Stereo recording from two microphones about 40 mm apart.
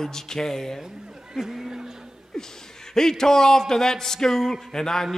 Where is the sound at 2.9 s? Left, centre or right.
Centre.